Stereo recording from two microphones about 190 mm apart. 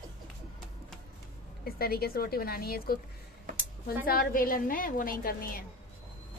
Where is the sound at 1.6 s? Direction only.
55° left (ahead or behind).